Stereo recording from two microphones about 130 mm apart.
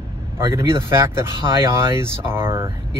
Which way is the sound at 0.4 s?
25° right (ahead or behind).